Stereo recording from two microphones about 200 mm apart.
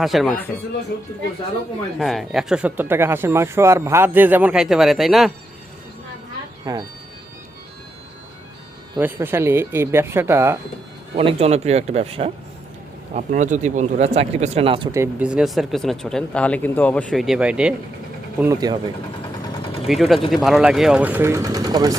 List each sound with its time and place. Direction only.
0.0 s speech: centre (ahead or behind)
2.0 s speech: centre (ahead or behind)
6.7 s speech: 20° right (ahead or behind)
9.0 s speech: 10° right (ahead or behind)
11.2 s speech: 30° right (ahead or behind)
14.9 s speech: 10° right (ahead or behind)
18.3 s speech: 15° right (ahead or behind)
19.9 s speech: centre (ahead or behind); by 21.9 s 20° right (ahead or behind)